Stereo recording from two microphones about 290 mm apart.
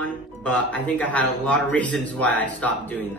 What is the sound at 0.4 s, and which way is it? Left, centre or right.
Speech, centre.